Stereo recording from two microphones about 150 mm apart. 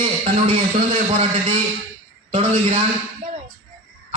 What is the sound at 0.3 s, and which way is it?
Speech, 40° right (ahead or behind).